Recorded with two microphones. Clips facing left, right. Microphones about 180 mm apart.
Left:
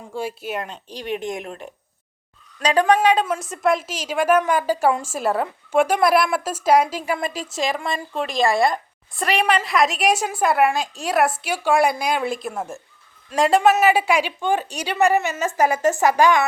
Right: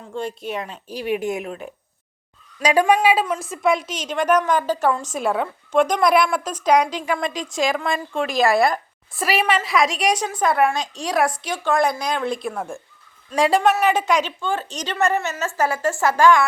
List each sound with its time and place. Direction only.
0.1 s a woman's voice: 5° left (ahead or behind)